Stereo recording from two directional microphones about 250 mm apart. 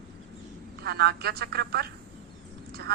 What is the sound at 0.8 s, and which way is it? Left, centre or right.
Speech, right.